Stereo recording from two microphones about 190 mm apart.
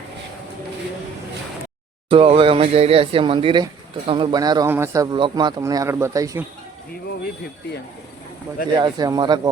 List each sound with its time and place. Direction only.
2.0 s speech: 30° right (ahead or behind)
8.7 s speech: 20° right (ahead or behind)